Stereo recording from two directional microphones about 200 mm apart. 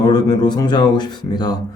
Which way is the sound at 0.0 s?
20° left (ahead or behind).